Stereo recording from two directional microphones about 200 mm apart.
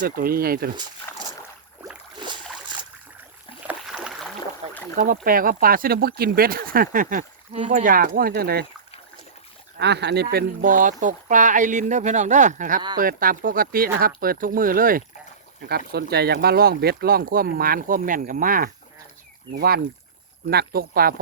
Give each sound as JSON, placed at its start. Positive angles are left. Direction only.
{"t": 0.0, "sound": "speech", "side_deg": -50}
{"t": 1.1, "sound": "boat", "side_deg": 15}
{"t": 2.2, "sound": "boat", "side_deg": -25}
{"t": 3.7, "sound": "rowboat", "side_deg": -5}
{"t": 4.7, "sound": "boat", "side_deg": 10}
{"t": 4.9, "sound": "speech", "side_deg": -45}
{"t": 9.7, "sound": "speech", "side_deg": -55}